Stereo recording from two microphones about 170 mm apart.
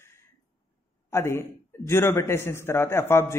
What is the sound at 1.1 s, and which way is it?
A man's voice, 15° left (ahead or behind).